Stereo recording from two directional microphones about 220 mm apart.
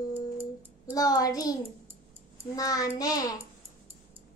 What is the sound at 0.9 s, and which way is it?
A child's voice, 15° left (ahead or behind).